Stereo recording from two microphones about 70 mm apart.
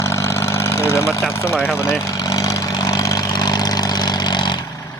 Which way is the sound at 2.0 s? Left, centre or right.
Left.